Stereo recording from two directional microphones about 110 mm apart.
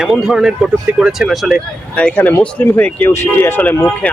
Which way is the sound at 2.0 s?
10° left (ahead or behind).